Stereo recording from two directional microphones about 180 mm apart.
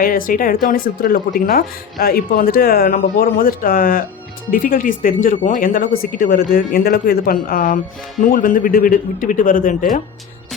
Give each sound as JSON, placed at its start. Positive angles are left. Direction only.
{"t": 0.0, "sound": "speech", "side_deg": 50}